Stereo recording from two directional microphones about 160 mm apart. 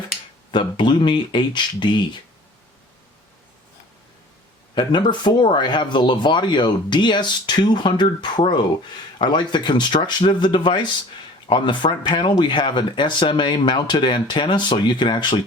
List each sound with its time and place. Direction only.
0.5 s speech: 30° left (ahead or behind)
4.7 s speech: 30° left (ahead or behind)